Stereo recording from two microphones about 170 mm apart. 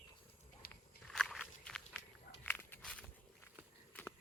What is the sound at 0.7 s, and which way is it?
Walk, 5° left (ahead or behind).